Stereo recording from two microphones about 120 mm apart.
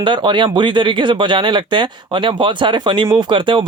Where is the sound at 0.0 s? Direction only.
40° right (ahead or behind).